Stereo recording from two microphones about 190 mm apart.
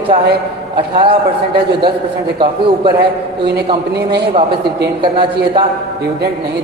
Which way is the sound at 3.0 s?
60° right (ahead or behind).